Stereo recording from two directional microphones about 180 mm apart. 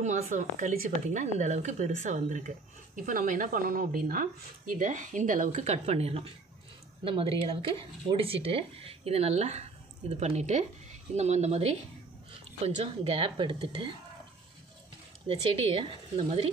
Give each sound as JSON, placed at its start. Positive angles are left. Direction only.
{"t": 0.0, "sound": "a woman's voice", "side_deg": -40}
{"t": 15.2, "sound": "a woman's voice", "side_deg": -30}